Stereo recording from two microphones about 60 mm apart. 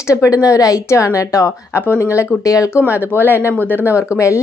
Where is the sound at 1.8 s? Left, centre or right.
Left.